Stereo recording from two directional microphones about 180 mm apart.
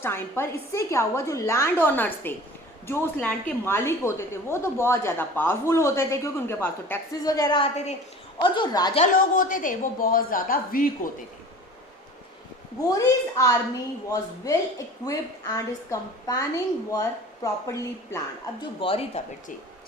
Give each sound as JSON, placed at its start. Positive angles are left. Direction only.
{"t": 0.0, "sound": "a woman's voice", "side_deg": 10}
{"t": 9.1, "sound": "speech", "side_deg": 50}
{"t": 12.9, "sound": "a woman's voice", "side_deg": 15}
{"t": 18.8, "sound": "speech", "side_deg": 30}